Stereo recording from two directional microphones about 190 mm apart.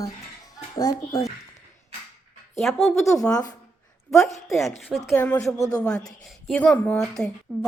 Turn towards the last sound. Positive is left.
turn(degrees=0)  # may be behind; listen again after turning